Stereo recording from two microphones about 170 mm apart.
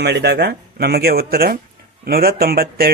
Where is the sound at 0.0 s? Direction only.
75° right (ahead or behind).